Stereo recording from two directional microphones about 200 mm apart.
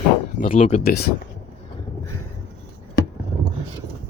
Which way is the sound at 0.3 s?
45° left (ahead or behind).